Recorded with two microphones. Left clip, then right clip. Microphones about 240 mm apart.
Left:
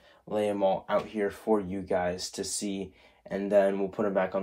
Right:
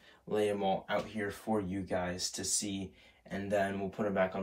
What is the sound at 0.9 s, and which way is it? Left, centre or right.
Speech, left.